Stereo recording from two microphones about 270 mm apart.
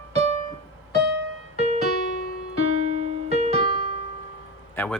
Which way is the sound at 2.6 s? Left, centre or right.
Right.